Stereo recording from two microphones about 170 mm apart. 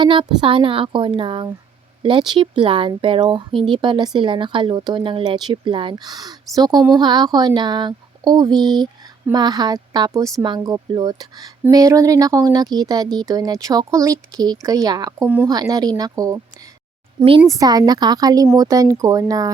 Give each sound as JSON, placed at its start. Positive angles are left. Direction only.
{"t": 0.0, "sound": "a woman's voice", "side_deg": -30}